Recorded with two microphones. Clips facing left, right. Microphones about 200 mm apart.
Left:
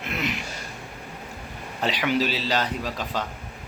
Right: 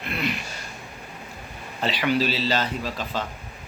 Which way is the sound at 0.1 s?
20° left (ahead or behind).